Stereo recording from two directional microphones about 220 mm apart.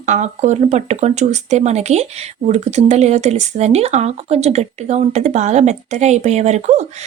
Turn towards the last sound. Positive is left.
turn(degrees=-30)  # may be behind; listen again after turning